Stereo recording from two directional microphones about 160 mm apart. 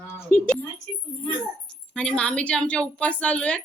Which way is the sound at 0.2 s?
15° left (ahead or behind).